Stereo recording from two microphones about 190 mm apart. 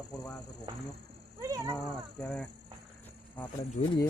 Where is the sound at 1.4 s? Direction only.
15° right (ahead or behind).